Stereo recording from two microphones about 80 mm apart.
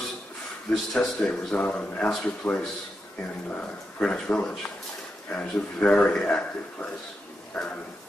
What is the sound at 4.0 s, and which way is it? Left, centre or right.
A man's voice, centre.